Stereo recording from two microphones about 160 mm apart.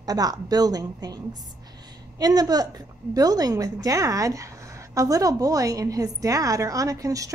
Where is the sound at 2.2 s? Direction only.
25° right (ahead or behind).